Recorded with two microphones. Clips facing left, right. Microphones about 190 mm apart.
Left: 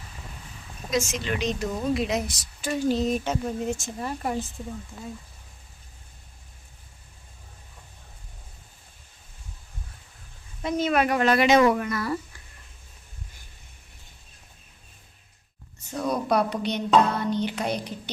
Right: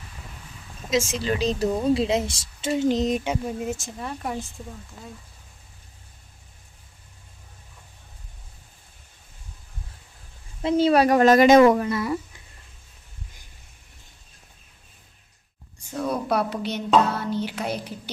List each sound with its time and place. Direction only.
1.1 s a woman's voice: 35° right (ahead or behind); by 4.5 s centre (ahead or behind)
10.6 s a woman's voice: 30° right (ahead or behind); by 11.8 s 45° right (ahead or behind)
11.8 s a woman's voice: 25° right (ahead or behind)
15.9 s a sound: 5° right (ahead or behind)